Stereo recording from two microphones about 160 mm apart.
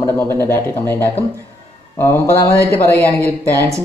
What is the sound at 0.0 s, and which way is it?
Speech, 15° left (ahead or behind).